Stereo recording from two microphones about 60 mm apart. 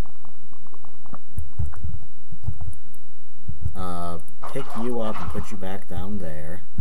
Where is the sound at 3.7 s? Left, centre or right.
Centre.